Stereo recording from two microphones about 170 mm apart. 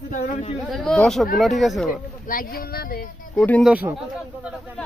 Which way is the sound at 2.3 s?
55° left (ahead or behind).